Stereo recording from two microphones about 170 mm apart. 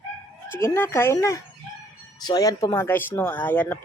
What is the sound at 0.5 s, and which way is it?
Speech, 15° left (ahead or behind).